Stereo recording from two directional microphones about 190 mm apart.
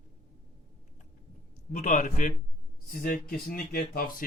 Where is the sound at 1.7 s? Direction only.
40° left (ahead or behind).